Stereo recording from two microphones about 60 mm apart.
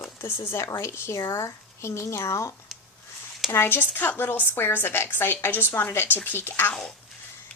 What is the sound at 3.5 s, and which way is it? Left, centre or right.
A woman's voice, left.